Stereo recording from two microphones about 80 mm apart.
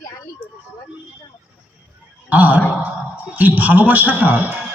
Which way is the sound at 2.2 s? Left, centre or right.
Centre.